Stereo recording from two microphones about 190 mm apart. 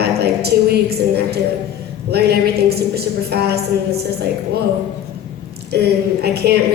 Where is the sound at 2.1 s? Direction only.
55° right (ahead or behind).